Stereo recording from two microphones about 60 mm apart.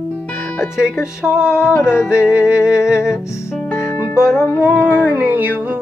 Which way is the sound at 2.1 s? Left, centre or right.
Centre.